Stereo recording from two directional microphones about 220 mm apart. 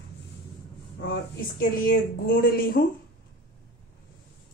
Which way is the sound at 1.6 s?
40° left (ahead or behind).